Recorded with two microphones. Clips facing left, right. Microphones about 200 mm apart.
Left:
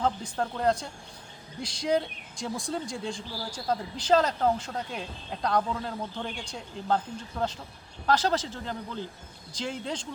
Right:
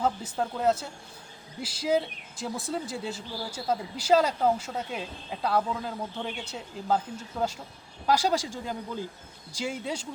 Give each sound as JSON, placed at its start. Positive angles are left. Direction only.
{"t": 0.0, "sound": "speech", "side_deg": -5}